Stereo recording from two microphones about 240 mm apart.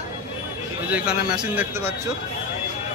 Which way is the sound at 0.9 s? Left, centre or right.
Centre.